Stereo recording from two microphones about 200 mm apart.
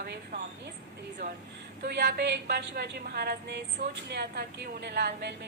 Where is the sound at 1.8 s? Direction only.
55° right (ahead or behind).